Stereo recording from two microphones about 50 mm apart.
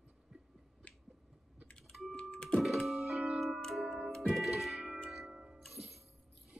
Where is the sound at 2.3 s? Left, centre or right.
Centre.